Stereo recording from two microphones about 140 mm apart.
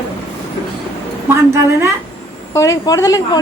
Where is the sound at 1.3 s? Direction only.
20° right (ahead or behind).